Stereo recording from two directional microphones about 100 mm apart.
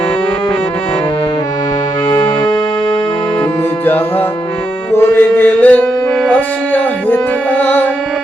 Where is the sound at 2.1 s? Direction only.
60° left (ahead or behind).